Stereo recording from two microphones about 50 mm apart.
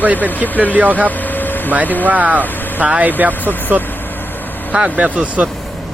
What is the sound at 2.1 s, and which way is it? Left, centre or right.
Speech, right.